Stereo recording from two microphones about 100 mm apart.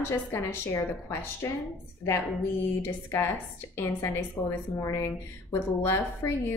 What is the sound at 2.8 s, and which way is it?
A woman's voice, 20° left (ahead or behind).